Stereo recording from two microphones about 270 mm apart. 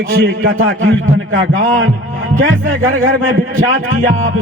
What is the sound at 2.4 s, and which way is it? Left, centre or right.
Speech, right.